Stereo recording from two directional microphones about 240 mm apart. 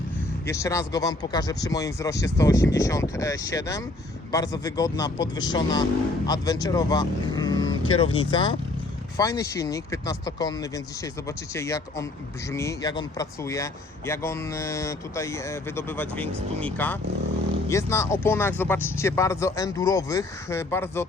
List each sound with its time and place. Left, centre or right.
0.4 s speech: centre